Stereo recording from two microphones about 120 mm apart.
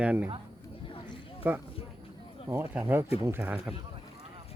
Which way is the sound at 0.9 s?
45° left (ahead or behind).